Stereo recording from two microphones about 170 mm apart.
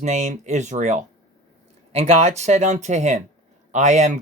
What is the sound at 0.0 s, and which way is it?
Speech, 45° right (ahead or behind).